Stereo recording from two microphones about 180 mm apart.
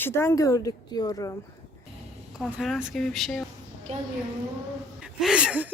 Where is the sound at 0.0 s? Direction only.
15° left (ahead or behind).